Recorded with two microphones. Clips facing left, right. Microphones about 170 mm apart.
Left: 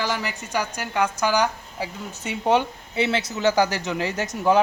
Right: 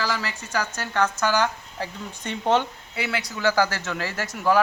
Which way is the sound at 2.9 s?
25° left (ahead or behind).